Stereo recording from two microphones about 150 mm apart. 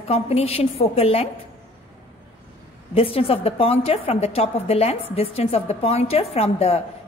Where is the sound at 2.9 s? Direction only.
40° left (ahead or behind).